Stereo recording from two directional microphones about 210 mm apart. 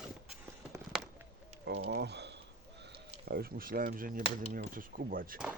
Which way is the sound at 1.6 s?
55° right (ahead or behind).